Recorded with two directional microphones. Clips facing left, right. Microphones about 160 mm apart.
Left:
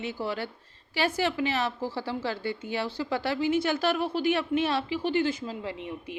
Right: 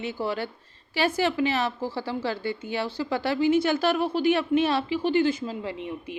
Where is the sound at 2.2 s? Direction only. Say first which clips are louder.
Right 2 dB; 30° right (ahead or behind).